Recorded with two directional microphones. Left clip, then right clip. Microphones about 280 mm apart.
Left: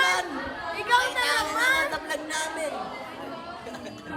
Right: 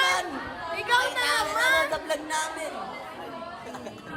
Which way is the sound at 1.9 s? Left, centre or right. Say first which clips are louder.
Right 2 dB; right.